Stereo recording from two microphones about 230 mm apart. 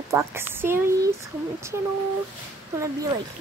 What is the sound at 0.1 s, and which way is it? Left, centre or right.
Speech, centre.